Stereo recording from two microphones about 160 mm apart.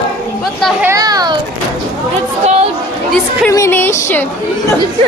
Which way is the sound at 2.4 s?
45° right (ahead or behind).